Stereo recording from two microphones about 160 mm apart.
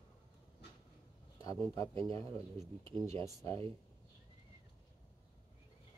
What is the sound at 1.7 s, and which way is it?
A man's voice, 20° left (ahead or behind).